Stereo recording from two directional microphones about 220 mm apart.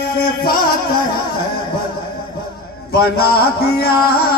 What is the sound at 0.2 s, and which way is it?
Music, 40° left (ahead or behind).